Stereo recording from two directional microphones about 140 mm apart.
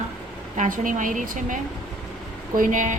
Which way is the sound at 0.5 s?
70° right (ahead or behind).